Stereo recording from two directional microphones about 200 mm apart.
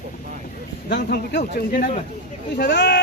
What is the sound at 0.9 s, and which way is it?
Speech, 55° left (ahead or behind).